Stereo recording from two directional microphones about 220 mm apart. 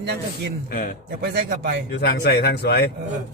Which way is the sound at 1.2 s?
45° right (ahead or behind).